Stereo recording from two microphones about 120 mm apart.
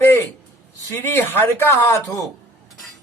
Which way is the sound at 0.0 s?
20° left (ahead or behind).